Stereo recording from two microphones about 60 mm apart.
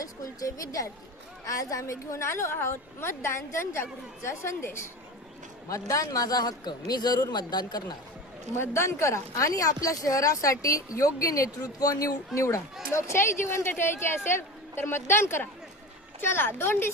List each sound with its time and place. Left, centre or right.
0.0 s a woman's voice: left
5.7 s a man's voice: left
8.5 s a woman's voice: left
9.3 s a woman's voice: left